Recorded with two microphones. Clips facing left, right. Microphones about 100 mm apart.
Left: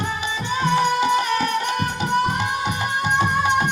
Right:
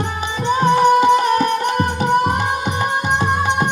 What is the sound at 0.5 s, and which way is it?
Music, 40° right (ahead or behind).